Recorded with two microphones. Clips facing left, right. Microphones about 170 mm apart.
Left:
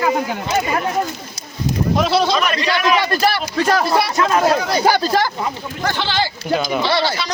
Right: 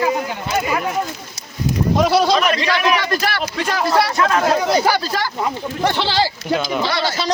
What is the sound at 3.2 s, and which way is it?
Speech, 40° left (ahead or behind).